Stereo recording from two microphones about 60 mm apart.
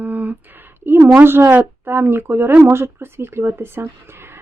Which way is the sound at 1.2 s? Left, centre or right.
Right.